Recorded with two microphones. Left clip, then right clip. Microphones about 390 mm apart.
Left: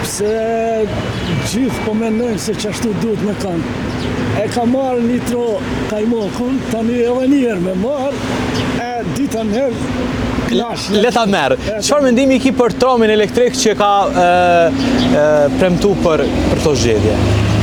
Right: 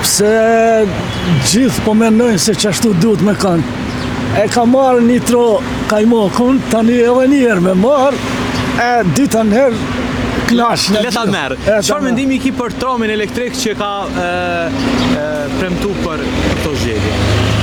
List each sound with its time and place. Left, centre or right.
0.2 s speech: right
10.5 s speech: centre